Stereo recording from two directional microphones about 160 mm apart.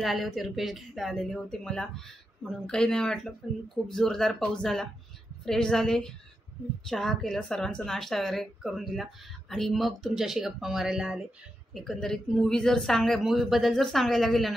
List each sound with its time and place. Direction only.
0.0 s a woman's voice: centre (ahead or behind)